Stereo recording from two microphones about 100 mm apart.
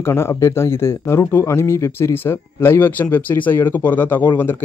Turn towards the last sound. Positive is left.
turn(degrees=20)  # may be behind; listen again after turning